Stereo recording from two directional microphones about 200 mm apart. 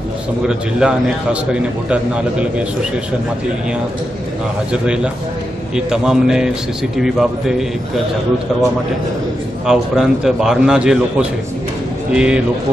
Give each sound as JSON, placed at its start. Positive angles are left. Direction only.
{"t": 0.5, "sound": "a man's voice", "side_deg": -5}
{"t": 4.8, "sound": "a man's voice", "side_deg": -5}
{"t": 9.7, "sound": "a man's voice", "side_deg": 0}